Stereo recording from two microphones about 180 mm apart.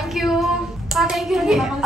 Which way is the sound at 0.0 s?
Centre (ahead or behind).